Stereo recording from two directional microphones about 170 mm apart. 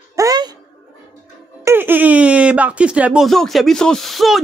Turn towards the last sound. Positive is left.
turn(degrees=0)  # may be behind; listen again after turning